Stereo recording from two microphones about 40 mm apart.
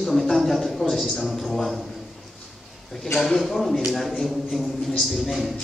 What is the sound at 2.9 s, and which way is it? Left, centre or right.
A man's voice, centre.